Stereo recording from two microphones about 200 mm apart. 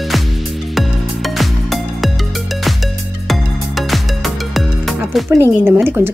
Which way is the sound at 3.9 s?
Centre (ahead or behind).